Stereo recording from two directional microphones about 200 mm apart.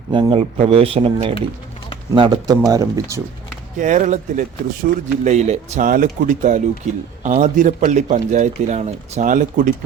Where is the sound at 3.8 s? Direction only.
40° right (ahead or behind).